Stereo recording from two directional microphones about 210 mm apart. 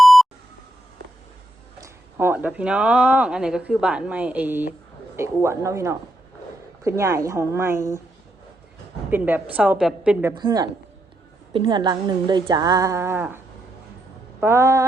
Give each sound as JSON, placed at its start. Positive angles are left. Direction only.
{"t": 0.0, "sound": "beep", "side_deg": 0}
{"t": 1.8, "sound": "speech", "side_deg": -10}
{"t": 9.0, "sound": "speech", "side_deg": -10}
{"t": 10.3, "sound": "a woman's voice", "side_deg": -20}
{"t": 14.4, "sound": "speech", "side_deg": -15}